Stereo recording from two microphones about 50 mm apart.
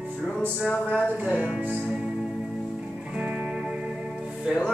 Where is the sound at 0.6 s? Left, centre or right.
Left.